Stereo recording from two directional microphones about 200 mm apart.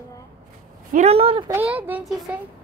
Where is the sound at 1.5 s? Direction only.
10° right (ahead or behind).